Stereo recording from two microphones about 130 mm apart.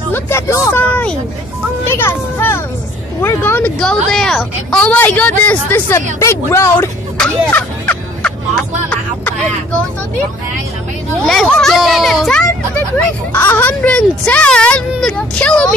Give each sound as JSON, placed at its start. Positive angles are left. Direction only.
{"t": 0.1, "sound": "a woman's voice", "side_deg": 20}
{"t": 3.8, "sound": "a woman's voice", "side_deg": 5}
{"t": 7.2, "sound": "music", "side_deg": 10}
{"t": 11.2, "sound": "a child's voice", "side_deg": 0}
{"t": 13.3, "sound": "a woman's voice", "side_deg": 15}